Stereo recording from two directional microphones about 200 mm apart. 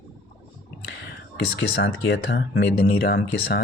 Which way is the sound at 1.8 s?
70° left (ahead or behind).